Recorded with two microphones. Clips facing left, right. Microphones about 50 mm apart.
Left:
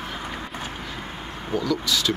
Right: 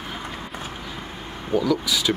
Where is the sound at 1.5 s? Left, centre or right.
Centre.